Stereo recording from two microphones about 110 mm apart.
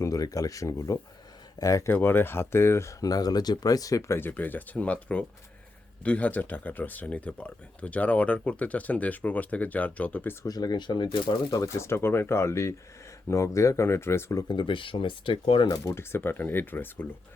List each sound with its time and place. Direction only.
0.0 s speech: 30° left (ahead or behind)
1.9 s speech: 20° left (ahead or behind)
4.2 s speech: 15° left (ahead or behind)
10.4 s speech: 35° left (ahead or behind)
14.4 s speech: 50° left (ahead or behind)
15.7 s speech: 25° left (ahead or behind)